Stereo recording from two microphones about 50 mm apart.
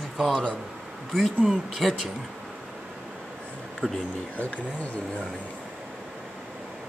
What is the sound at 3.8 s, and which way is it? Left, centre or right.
Speech, left.